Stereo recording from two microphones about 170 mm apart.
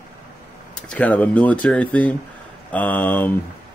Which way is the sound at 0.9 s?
10° left (ahead or behind).